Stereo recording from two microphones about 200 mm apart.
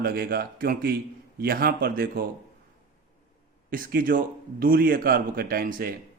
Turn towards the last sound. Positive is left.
turn(degrees=-45)  # may be behind; listen again after turning